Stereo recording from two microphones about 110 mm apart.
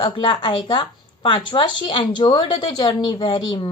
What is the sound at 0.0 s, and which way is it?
A woman's voice, 50° left (ahead or behind).